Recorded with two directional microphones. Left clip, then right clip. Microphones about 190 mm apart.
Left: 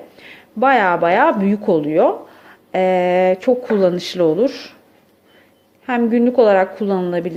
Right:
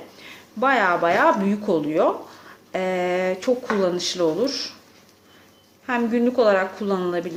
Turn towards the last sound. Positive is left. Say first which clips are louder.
# left 5 dB
turn(degrees=25)  # may be behind; listen again after turning